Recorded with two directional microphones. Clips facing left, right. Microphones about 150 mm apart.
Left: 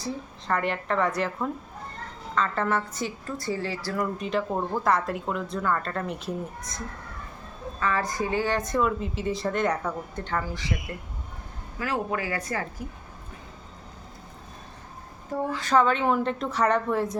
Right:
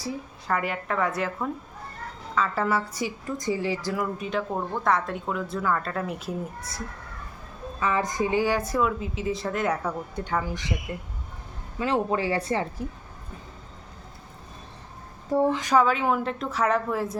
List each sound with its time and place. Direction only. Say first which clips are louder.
0.0 s speech: even; 5° right (ahead or behind)
3.9 s speech: left 1 dB; 5° right (ahead or behind)
7.8 s speech: right 2 dB; 15° right (ahead or behind)
15.5 s speech: even; 10° right (ahead or behind)